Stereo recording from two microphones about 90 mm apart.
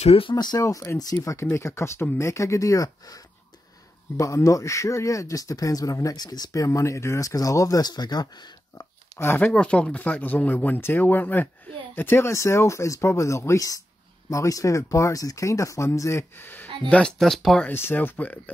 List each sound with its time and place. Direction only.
0.1 s speech: 80° left
0.6 s speech: 35° left (ahead or behind)
9.4 s speech: 10° left (ahead or behind)
16.9 s speech: 5° left (ahead or behind)
17.6 s speech: 25° left (ahead or behind)